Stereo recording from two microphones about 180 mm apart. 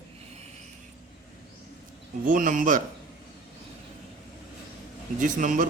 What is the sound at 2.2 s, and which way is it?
Speech, 50° right (ahead or behind).